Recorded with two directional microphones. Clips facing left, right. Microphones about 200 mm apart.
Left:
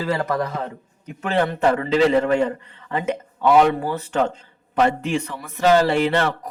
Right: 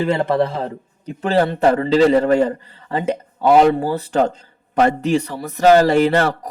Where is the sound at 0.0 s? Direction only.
25° right (ahead or behind).